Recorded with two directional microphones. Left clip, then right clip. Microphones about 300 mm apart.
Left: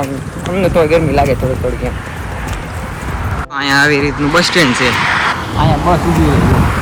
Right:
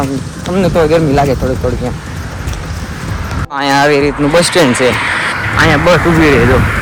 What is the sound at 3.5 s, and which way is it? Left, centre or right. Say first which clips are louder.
Speech: right 2 dB; centre.